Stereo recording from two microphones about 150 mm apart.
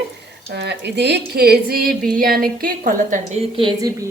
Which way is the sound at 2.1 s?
75° right (ahead or behind).